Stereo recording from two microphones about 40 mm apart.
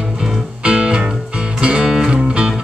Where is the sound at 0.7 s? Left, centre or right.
Right.